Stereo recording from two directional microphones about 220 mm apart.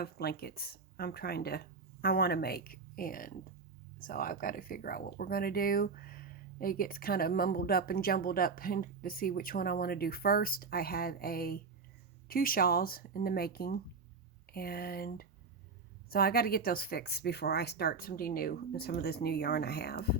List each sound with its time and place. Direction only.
0.0 s speech: 45° left (ahead or behind)